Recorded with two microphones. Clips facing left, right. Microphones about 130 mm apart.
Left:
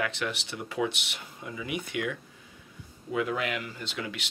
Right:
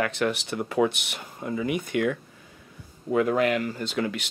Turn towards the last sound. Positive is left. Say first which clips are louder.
# right 8 dB
turn(degrees=-45)  # may be behind; listen again after turning